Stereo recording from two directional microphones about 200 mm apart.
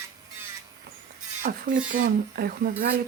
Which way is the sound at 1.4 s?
40° right (ahead or behind).